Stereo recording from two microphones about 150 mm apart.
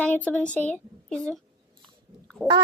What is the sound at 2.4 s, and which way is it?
Speech, 5° left (ahead or behind).